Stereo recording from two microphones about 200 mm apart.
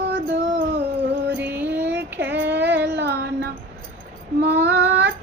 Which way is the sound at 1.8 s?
60° right (ahead or behind).